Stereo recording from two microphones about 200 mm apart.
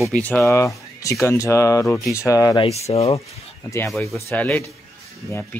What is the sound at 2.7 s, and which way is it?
Speech, 30° left (ahead or behind).